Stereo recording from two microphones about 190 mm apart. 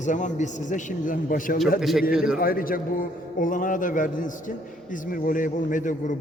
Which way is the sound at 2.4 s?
50° left (ahead or behind).